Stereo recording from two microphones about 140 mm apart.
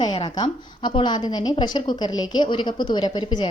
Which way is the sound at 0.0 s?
35° left (ahead or behind).